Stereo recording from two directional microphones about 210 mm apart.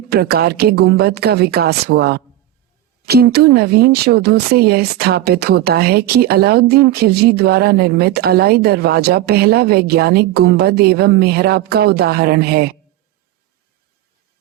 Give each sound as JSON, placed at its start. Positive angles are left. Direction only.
{"t": 0.1, "sound": "speech", "side_deg": -50}